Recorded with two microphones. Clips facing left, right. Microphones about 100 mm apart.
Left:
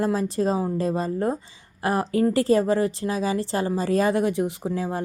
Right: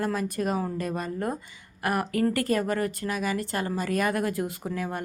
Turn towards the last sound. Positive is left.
turn(degrees=25)  # may be behind; listen again after turning